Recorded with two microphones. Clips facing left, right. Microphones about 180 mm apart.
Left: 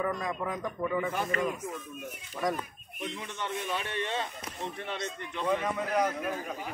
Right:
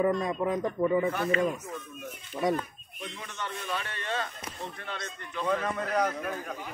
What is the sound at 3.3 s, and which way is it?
A man's voice, 15° left (ahead or behind).